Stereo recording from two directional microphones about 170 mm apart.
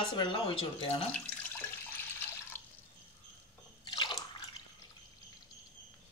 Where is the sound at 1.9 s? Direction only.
10° left (ahead or behind).